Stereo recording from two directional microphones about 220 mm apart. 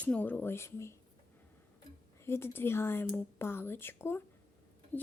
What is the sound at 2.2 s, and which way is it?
Speech, 10° left (ahead or behind).